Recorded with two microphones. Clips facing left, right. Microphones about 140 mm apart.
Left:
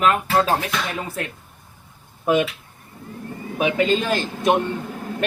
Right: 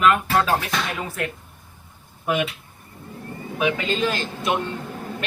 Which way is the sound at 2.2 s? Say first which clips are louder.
Left 4 dB; 35° left (ahead or behind).